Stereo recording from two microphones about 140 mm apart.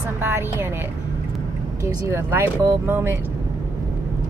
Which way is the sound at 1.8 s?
20° right (ahead or behind).